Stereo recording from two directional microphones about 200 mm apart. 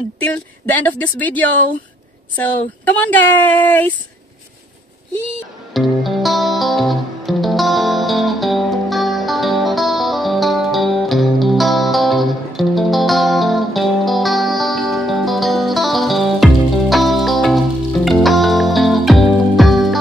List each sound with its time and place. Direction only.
0.2 s speech: 10° left (ahead or behind)
5.7 s music: centre (ahead or behind)